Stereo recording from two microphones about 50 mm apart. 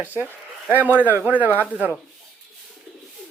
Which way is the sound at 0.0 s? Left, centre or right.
Right.